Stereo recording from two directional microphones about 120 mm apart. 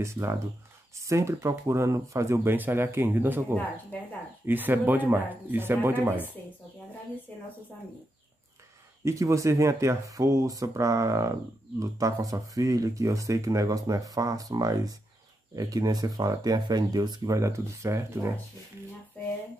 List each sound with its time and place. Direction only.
0.0 s speech: 25° right (ahead or behind)
7.3 s speech: 10° left (ahead or behind)
9.0 s speech: 25° right (ahead or behind)